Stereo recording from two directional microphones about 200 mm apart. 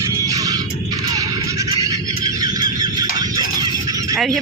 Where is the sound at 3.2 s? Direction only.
20° right (ahead or behind).